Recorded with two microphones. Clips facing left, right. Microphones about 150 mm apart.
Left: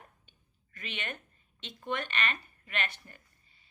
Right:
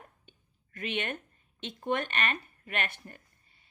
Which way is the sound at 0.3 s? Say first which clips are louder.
Right 7 dB; 55° right (ahead or behind).